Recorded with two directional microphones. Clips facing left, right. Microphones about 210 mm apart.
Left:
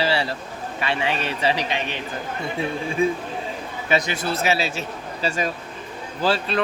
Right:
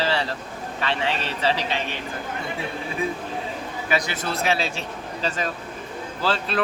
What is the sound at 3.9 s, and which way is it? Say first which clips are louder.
Speech: left 3 dB; 20° left (ahead or behind).